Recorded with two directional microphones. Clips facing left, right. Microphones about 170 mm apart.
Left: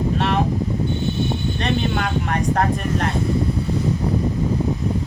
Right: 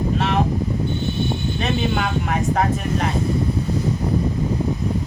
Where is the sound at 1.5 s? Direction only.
5° right (ahead or behind).